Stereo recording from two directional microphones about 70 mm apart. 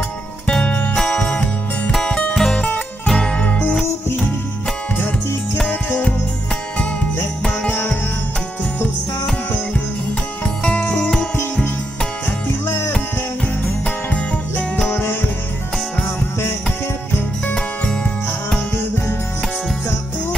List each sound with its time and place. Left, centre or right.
0.5 s music: centre
4.9 s music: left
7.7 s music: centre
10.4 s music: centre
13.7 s music: centre